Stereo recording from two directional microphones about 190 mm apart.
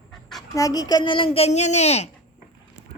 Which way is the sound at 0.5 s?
20° left (ahead or behind).